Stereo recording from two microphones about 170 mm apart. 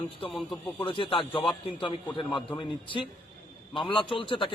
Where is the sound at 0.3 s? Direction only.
Centre (ahead or behind).